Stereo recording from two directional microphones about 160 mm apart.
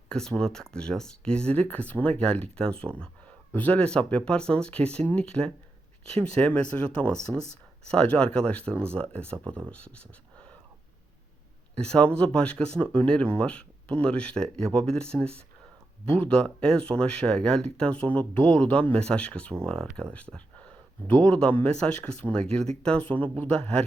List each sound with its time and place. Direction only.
0.1 s speech: 5° left (ahead or behind)
7.2 s speech: 50° left (ahead or behind)
7.9 s speech: 5° left (ahead or behind)
11.7 s speech: 5° left (ahead or behind)
20.3 s a sound: 5° left (ahead or behind)
21.2 s speech: 5° left (ahead or behind)